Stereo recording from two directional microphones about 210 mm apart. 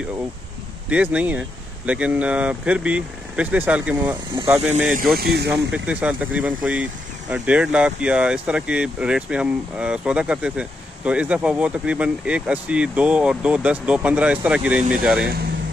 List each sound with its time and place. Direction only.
0.8 s speech: 5° right (ahead or behind)
5.2 s speech: 50° right (ahead or behind)
5.5 s speech: 5° right (ahead or behind)